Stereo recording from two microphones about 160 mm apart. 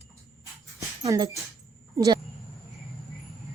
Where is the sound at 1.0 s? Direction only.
20° right (ahead or behind).